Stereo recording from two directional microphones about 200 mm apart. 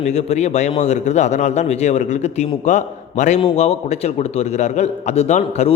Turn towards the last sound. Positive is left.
turn(degrees=35)  # may be behind; listen again after turning